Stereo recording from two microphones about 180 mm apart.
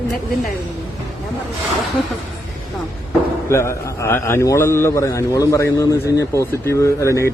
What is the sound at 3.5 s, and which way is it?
A man's voice, 15° left (ahead or behind).